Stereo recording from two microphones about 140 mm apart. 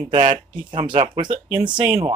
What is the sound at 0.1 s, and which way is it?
Speech, 35° right (ahead or behind).